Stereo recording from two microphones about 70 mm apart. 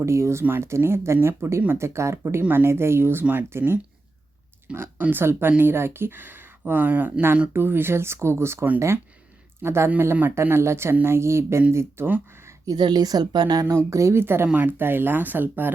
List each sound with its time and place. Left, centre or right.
0.0 s speech: right
12.7 s a woman's voice: right
13.7 s speech: right
14.4 s speech: right